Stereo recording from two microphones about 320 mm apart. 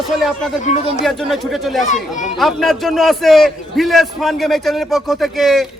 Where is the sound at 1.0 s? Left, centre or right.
Centre.